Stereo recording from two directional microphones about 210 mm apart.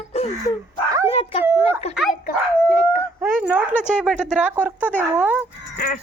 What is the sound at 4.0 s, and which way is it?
Speech, 5° right (ahead or behind).